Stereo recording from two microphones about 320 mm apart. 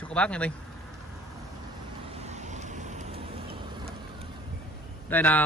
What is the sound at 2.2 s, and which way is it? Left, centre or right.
Vehicle, right.